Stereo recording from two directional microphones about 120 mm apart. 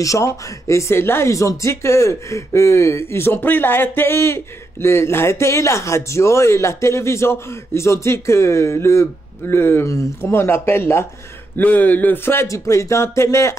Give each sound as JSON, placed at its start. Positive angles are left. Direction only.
{"t": 0.0, "sound": "speech", "side_deg": 25}